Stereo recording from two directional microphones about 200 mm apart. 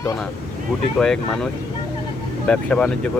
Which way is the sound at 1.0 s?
5° left (ahead or behind).